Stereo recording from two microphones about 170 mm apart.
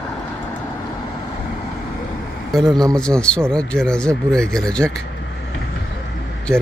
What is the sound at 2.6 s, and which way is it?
Speech, 25° right (ahead or behind).